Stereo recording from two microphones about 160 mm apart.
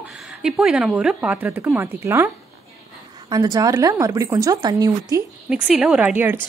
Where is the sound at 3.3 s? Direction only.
25° right (ahead or behind).